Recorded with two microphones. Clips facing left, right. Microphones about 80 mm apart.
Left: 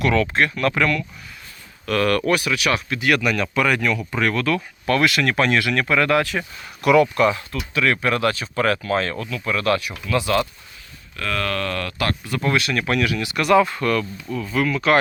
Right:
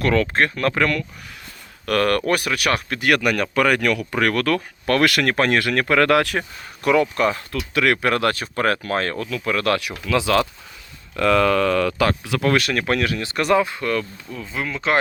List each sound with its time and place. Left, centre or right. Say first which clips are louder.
0.0 s speech: even; right
6.8 s speech: left 2 dB; right
7.5 s speech: right 1 dB; right
10.1 s speech: right 2 dB; right
12.2 s speech: right 3 dB; right
12.5 s speech: right 1 dB; right
13.6 s speech: left 3 dB; centre
14.0 s speech: left 5 dB; left
14.4 s speech: left 4 dB; right